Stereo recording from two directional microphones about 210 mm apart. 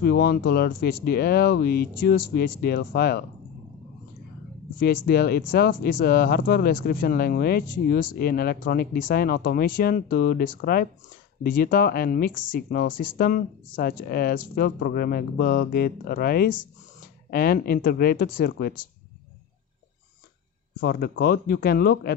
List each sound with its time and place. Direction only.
0.0 s speech: 45° left (ahead or behind)
4.7 s speech: 50° left (ahead or behind)
20.8 s speech: 50° left (ahead or behind)